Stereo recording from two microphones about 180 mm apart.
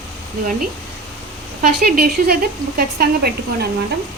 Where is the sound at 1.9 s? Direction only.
55° right (ahead or behind).